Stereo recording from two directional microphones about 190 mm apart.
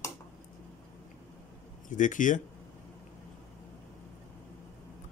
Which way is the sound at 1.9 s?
45° left (ahead or behind).